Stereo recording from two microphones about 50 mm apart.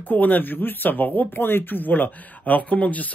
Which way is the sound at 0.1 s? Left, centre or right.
Left.